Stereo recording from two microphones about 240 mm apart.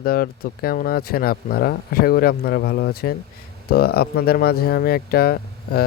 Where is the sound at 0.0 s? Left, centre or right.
Left.